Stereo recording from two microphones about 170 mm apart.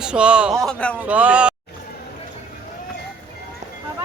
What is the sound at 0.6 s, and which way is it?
Speech, 5° left (ahead or behind).